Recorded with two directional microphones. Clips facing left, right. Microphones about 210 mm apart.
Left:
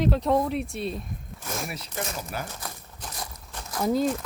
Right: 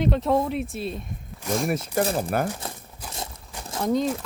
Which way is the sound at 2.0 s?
35° right (ahead or behind).